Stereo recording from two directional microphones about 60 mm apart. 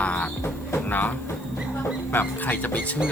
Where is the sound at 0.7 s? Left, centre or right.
Left.